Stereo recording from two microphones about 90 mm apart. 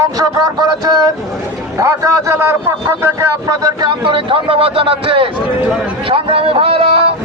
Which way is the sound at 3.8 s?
65° right (ahead or behind).